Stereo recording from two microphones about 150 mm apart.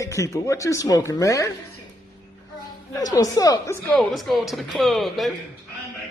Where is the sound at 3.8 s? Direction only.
Centre (ahead or behind).